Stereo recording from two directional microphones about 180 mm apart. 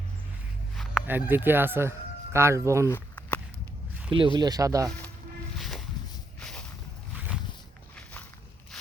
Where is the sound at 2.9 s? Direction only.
10° left (ahead or behind).